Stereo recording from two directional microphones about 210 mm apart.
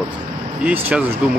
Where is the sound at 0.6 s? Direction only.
5° right (ahead or behind).